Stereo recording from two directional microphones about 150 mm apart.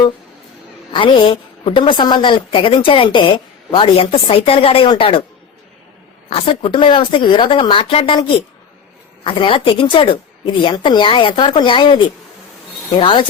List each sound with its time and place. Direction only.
0.9 s a woman's voice: 35° left (ahead or behind)
6.3 s a woman's voice: 40° left (ahead or behind)